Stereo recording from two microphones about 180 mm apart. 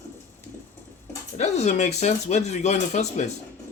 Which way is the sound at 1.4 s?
40° left (ahead or behind).